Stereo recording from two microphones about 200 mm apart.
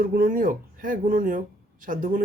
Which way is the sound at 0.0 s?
45° right (ahead or behind).